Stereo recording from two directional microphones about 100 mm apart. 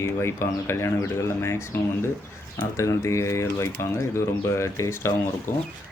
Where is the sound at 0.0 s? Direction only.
25° left (ahead or behind).